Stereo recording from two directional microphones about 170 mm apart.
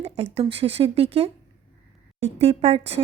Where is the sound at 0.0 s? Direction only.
35° right (ahead or behind).